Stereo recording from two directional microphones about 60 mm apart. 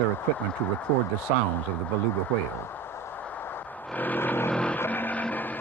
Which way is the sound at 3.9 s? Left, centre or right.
Left.